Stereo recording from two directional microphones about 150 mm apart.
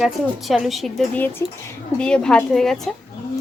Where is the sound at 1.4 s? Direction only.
15° left (ahead or behind).